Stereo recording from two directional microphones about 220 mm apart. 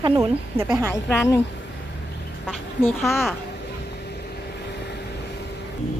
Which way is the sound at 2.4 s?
Centre (ahead or behind).